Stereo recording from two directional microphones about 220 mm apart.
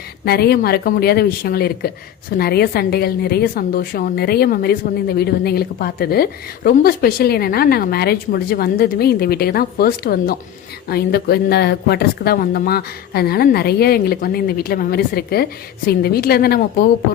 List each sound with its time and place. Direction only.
0.3 s speech: 45° left (ahead or behind)